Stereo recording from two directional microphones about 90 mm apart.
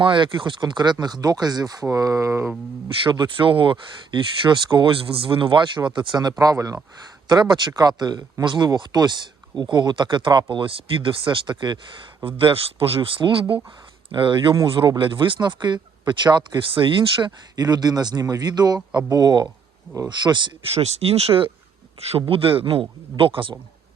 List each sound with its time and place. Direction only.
0.0 s speech: 65° right (ahead or behind); by 2.5 s 35° right (ahead or behind)
3.0 s speech: 65° right (ahead or behind)
6.4 s speech: 40° right (ahead or behind); by 10.4 s 60° right (ahead or behind)
10.5 s speech: 75° right (ahead or behind); by 11.8 s 55° right (ahead or behind)
12.2 s speech: 75° right (ahead or behind); by 16.6 s 55° right (ahead or behind)
16.7 s speech: 65° right (ahead or behind)
21.0 s speech: 90° right; by 23.6 s 75° right (ahead or behind)